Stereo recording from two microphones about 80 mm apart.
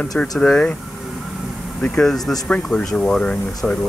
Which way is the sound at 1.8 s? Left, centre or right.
Centre.